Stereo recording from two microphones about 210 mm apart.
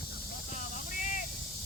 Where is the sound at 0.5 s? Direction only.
40° left (ahead or behind).